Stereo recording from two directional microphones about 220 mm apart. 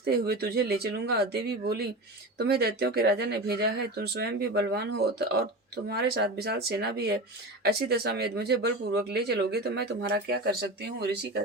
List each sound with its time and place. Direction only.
0.0 s speech: 45° right (ahead or behind)